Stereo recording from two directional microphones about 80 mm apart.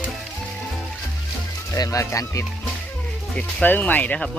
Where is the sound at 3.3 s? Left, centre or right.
Centre.